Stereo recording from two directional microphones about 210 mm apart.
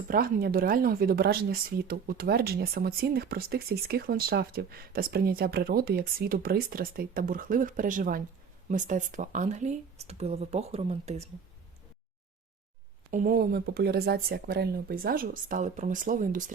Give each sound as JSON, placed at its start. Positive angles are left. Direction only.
{"t": 0.1, "sound": "speech", "side_deg": -45}
{"t": 13.1, "sound": "speech", "side_deg": -40}